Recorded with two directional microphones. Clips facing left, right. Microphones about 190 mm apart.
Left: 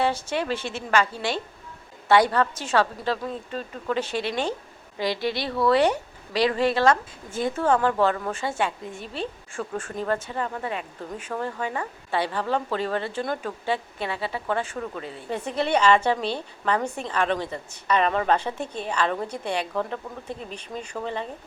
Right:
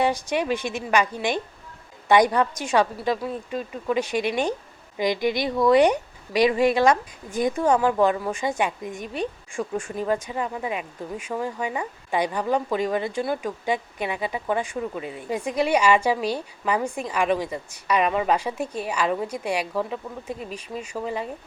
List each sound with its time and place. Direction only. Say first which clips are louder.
0.0 s speech: right 2 dB; 15° right (ahead or behind)